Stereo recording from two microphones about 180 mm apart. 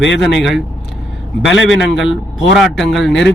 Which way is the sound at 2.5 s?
Centre (ahead or behind).